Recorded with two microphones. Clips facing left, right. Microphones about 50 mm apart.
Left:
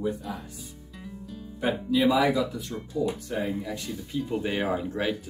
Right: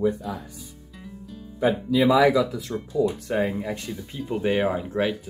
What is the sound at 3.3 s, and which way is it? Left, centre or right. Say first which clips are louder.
Speech: right 5 dB; right.